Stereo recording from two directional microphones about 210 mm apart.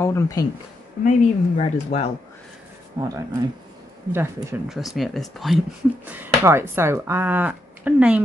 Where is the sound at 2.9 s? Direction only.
20° right (ahead or behind).